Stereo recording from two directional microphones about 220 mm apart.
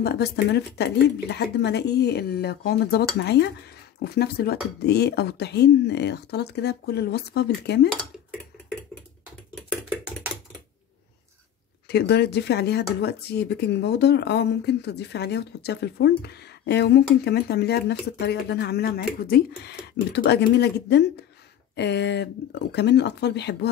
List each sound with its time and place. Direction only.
0.0 s speech: 45° left (ahead or behind)
8.6 s typing: 5° left (ahead or behind)
11.9 s speech: 50° left (ahead or behind)